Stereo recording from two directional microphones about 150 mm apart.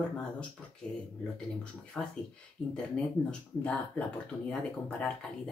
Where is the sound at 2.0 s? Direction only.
5° left (ahead or behind).